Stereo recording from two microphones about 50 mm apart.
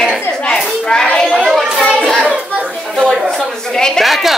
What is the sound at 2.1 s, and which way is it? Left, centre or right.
Children playing, centre.